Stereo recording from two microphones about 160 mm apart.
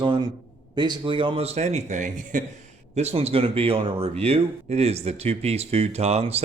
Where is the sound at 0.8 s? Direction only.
30° right (ahead or behind).